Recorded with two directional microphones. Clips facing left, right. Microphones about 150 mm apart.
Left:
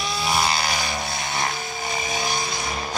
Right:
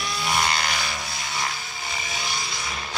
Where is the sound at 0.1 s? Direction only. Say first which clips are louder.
Left 2 dB; 5° left (ahead or behind).